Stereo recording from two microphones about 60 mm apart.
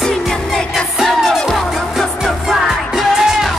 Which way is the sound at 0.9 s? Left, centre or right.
Centre.